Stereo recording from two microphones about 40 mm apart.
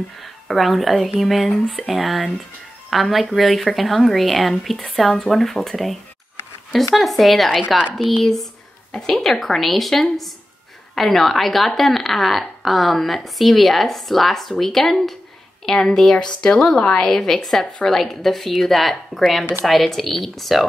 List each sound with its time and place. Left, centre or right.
0.2 s a woman's voice: centre
16.2 s a woman's voice: left; by 20.6 s centre